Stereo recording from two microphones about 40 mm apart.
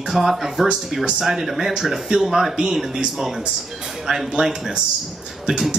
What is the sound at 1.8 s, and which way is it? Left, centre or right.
Speech, centre.